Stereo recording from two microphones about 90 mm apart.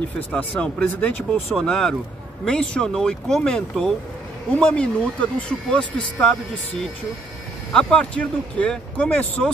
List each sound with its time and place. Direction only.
0.3 s speech: 15° left (ahead or behind)
1.5 s speech: 5° left (ahead or behind)
7.7 s speech: 10° left (ahead or behind)